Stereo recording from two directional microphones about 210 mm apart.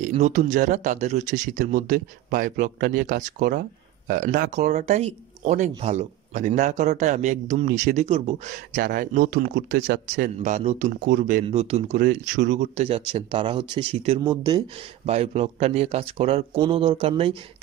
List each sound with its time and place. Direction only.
0.0 s speech: 35° right (ahead or behind)
8.7 s speech: 40° right (ahead or behind)
10.3 s speech: 30° right (ahead or behind)
11.4 s speech: 30° right (ahead or behind)
12.0 s speech: 40° right (ahead or behind); by 17.4 s 25° right (ahead or behind)